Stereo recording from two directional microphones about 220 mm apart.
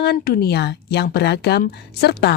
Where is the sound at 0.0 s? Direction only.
45° left (ahead or behind).